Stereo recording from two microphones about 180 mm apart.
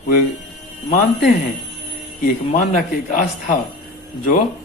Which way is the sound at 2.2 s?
50° left (ahead or behind).